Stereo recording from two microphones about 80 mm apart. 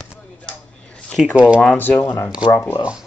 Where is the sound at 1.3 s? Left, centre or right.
Centre.